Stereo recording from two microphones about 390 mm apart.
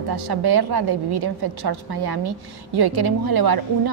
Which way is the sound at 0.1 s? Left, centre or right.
Right.